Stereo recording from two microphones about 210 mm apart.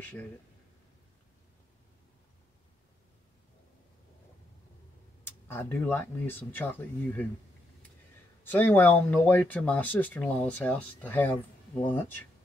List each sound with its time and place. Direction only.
0.0 s speech: 10° left (ahead or behind)
5.2 s speech: 10° left (ahead or behind)
8.5 s speech: 10° left (ahead or behind)